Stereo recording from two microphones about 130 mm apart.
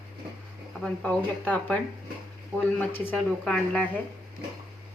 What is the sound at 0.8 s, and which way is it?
A woman's voice, 10° left (ahead or behind).